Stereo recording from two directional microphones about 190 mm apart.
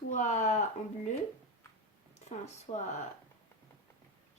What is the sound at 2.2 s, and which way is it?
Speech, 35° left (ahead or behind).